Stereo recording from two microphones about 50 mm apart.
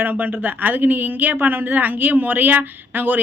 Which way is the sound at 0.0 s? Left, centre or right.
Right.